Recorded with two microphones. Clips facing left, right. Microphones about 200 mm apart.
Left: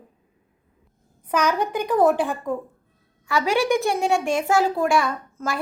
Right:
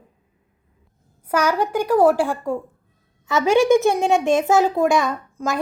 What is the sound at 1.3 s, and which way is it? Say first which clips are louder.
A woman's voice: right 2 dB; 10° right (ahead or behind).